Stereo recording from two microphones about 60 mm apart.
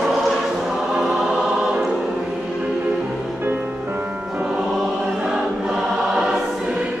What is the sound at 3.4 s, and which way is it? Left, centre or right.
Music, right.